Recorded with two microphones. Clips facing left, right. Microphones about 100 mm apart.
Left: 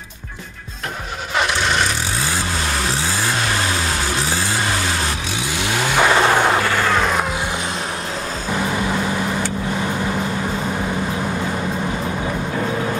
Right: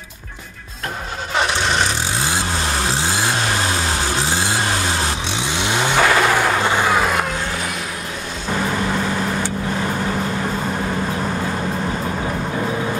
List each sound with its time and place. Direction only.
5.4 s vehicle: 25° right (ahead or behind)
5.9 s vehicle: 20° left (ahead or behind)
6.6 s vehicle: 15° right (ahead or behind)
7.0 s vehicle: centre (ahead or behind)